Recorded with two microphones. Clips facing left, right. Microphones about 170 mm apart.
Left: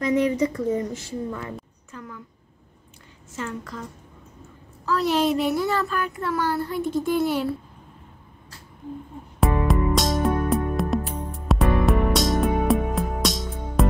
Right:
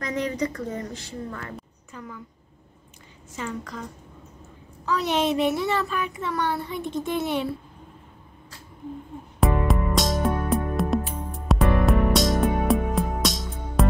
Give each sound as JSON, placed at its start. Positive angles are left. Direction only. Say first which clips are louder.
{"t": 0.1, "sound": "speech", "louder": "left 5 dB", "side_deg": 10}
{"t": 3.3, "sound": "a woman's voice", "louder": "even", "side_deg": 0}
{"t": 4.8, "sound": "a woman's voice", "louder": "left 2 dB", "side_deg": 0}
{"t": 9.4, "sound": "music", "louder": "left 1 dB", "side_deg": 0}